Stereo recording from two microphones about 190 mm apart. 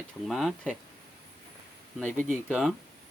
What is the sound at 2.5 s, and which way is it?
Speech, centre (ahead or behind).